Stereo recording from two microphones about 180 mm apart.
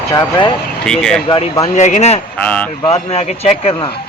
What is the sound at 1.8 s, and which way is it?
Speech, 40° left (ahead or behind).